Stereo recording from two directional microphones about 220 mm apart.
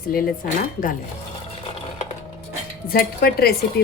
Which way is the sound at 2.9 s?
45° left (ahead or behind).